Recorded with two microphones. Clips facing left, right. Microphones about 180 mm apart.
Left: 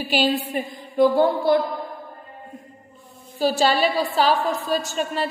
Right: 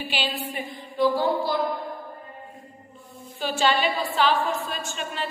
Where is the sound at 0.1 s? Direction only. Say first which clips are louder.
Left 12 dB; 40° left (ahead or behind).